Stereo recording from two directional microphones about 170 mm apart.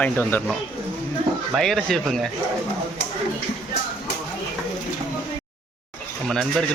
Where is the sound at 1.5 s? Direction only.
Centre (ahead or behind).